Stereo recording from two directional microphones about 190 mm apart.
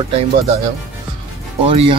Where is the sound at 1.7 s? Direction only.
30° right (ahead or behind).